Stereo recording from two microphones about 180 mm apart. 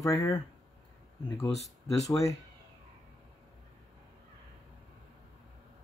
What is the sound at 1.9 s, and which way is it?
Speech, 20° left (ahead or behind).